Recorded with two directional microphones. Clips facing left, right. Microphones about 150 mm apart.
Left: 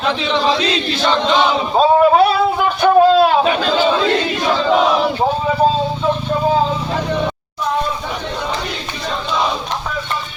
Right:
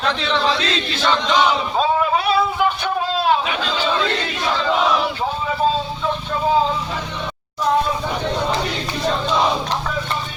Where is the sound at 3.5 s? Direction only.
50° left (ahead or behind).